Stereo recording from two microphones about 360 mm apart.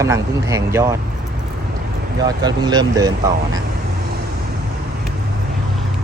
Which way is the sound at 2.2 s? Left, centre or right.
Centre.